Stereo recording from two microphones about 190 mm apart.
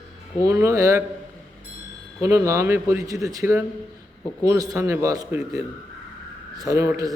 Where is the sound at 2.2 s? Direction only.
15° right (ahead or behind).